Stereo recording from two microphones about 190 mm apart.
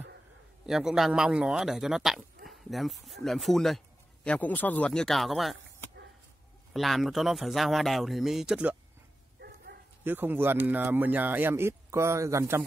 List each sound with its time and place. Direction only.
0.7 s speech: centre (ahead or behind)
6.7 s speech: centre (ahead or behind)
9.4 s bow-wow: 55° right (ahead or behind)
10.0 s speech: 10° right (ahead or behind)